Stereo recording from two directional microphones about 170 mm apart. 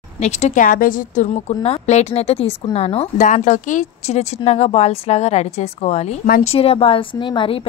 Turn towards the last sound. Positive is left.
turn(degrees=30)  # may be behind; listen again after turning